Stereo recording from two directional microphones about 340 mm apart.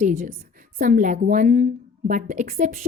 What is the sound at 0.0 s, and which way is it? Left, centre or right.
A woman's voice, right.